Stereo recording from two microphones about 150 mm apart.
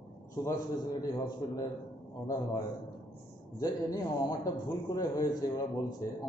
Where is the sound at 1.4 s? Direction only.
25° left (ahead or behind).